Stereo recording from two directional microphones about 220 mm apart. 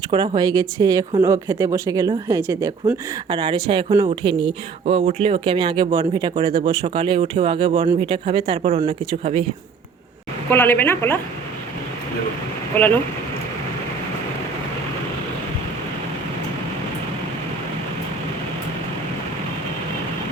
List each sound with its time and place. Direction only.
0.1 s speech: 20° right (ahead or behind)
10.5 s speech: 10° left (ahead or behind)
12.7 s speech: 10° left (ahead or behind)